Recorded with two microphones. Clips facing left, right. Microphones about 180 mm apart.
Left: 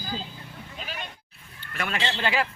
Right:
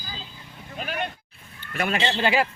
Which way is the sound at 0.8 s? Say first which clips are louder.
Right 9 dB; 60° right (ahead or behind).